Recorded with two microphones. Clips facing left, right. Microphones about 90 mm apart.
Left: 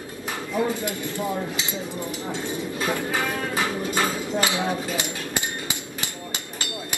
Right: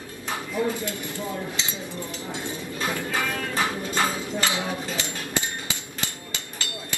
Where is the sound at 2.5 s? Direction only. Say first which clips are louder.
Left 3 dB; 15° left (ahead or behind).